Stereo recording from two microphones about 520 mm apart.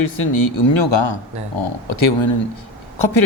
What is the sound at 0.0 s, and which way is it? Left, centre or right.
Speech, left.